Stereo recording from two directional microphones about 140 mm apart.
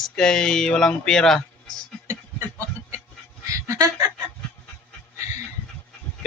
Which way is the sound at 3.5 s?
25° right (ahead or behind).